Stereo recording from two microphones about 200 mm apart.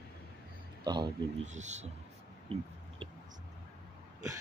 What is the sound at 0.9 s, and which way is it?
Speech, 25° right (ahead or behind).